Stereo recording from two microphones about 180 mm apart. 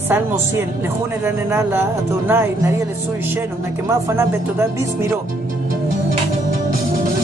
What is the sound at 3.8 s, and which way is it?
Speech, 15° right (ahead or behind).